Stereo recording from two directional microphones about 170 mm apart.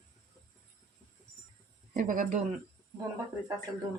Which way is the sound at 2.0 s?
50° right (ahead or behind).